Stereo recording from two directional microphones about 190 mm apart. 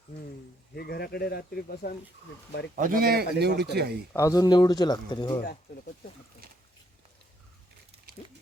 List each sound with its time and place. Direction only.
0.8 s speech: 55° left (ahead or behind)
2.7 s speech: 50° right (ahead or behind)
4.1 s speech: 15° left (ahead or behind)